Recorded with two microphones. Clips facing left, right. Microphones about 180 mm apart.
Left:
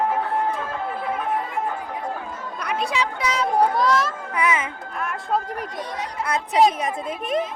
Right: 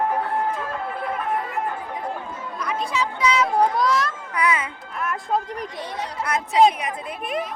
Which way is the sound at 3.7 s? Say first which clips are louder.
Left 1 dB; centre (ahead or behind).